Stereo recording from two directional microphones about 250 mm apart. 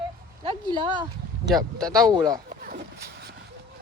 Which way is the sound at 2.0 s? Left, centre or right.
Centre.